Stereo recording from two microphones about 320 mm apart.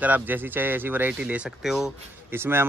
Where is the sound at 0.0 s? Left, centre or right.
Centre.